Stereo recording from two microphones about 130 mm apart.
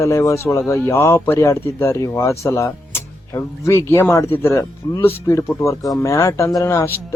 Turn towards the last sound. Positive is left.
turn(degrees=20)  # may be behind; listen again after turning